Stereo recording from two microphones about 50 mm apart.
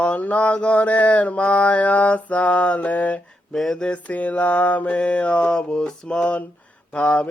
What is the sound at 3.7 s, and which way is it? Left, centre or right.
Mantra, left.